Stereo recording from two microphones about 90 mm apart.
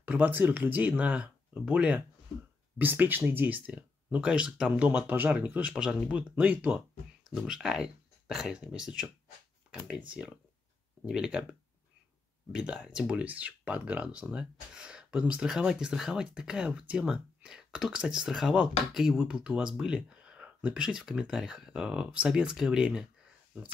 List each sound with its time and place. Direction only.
0.0 s speech: 20° right (ahead or behind)
12.5 s speech: 10° right (ahead or behind)
13.1 s speech: 15° right (ahead or behind)